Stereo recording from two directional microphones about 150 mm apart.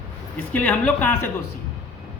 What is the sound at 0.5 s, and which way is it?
Speech, 10° left (ahead or behind).